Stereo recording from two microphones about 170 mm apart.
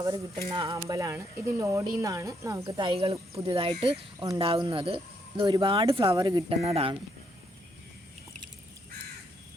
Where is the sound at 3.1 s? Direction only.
20° right (ahead or behind).